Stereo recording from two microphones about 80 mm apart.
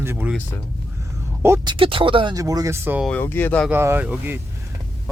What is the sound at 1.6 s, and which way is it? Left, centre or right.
Speech, right.